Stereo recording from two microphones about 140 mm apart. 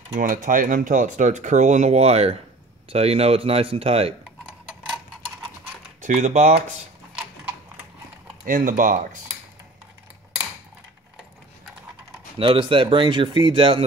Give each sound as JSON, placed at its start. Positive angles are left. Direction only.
{"t": 0.1, "sound": "speech", "side_deg": -70}
{"t": 5.9, "sound": "speech", "side_deg": -55}
{"t": 8.5, "sound": "speech", "side_deg": -65}
{"t": 12.4, "sound": "speech", "side_deg": -35}